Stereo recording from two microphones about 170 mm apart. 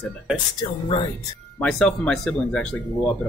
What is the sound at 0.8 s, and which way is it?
Speech, 30° left (ahead or behind).